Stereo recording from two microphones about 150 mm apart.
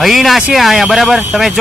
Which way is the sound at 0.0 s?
Centre (ahead or behind).